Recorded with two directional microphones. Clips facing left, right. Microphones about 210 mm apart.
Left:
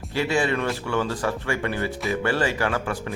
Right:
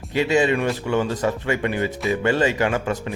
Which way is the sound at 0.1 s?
20° right (ahead or behind).